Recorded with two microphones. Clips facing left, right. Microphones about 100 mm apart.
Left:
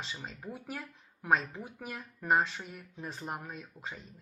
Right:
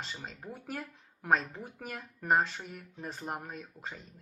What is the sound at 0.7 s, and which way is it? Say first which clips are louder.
Speech: right 2 dB; 45° right (ahead or behind).